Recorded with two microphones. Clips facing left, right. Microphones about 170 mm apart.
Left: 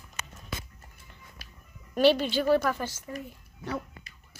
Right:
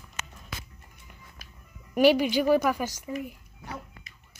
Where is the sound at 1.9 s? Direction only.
10° right (ahead or behind).